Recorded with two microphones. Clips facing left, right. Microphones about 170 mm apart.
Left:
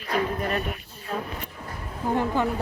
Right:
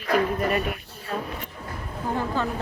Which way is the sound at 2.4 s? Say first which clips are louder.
Left 2 dB; 15° left (ahead or behind).